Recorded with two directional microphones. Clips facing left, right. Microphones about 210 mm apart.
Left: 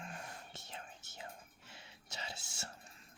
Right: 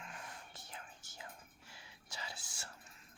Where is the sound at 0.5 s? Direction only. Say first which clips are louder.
Left 3 dB; 25° left (ahead or behind).